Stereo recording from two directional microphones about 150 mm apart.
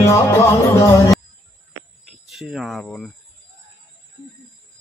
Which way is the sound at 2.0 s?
5° right (ahead or behind).